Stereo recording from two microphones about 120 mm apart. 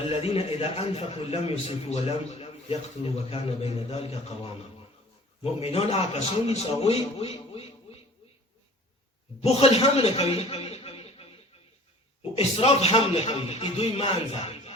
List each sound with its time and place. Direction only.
0.1 s a man's voice: 55° left (ahead or behind)
9.4 s a man's voice: 60° left (ahead or behind)
12.4 s a man's voice: 55° left (ahead or behind)